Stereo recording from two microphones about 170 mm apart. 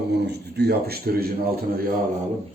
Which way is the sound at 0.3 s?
70° right (ahead or behind).